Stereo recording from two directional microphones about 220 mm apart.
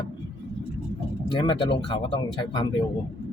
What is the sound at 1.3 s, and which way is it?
Speech, 20° left (ahead or behind).